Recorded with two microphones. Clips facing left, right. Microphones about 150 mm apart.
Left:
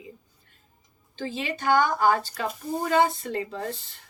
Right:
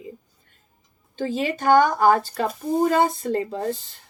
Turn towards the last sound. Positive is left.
turn(degrees=-35)  # may be behind; listen again after turning